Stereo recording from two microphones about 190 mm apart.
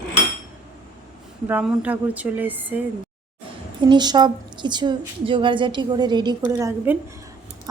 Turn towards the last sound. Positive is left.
turn(degrees=-15)  # may be behind; listen again after turning